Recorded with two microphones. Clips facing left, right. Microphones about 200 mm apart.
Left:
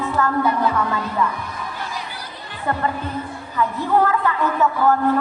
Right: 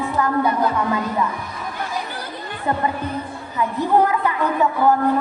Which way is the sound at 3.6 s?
15° right (ahead or behind).